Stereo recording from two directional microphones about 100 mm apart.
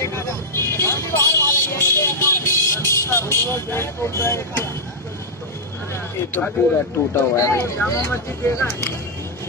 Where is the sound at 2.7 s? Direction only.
25° left (ahead or behind).